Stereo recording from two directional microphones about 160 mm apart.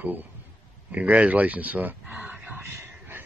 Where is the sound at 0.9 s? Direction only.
10° right (ahead or behind).